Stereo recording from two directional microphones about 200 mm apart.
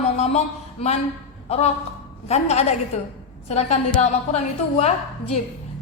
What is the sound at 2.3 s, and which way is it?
A woman's voice, 35° left (ahead or behind).